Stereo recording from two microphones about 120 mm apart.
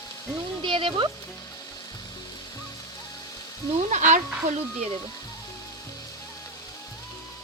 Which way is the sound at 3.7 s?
85° right.